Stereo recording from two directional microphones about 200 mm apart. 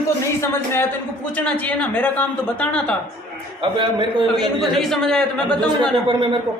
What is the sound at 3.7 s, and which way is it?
Speech, 25° right (ahead or behind).